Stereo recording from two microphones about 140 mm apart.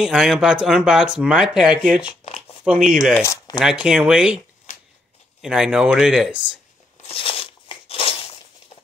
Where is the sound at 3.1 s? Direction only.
20° left (ahead or behind).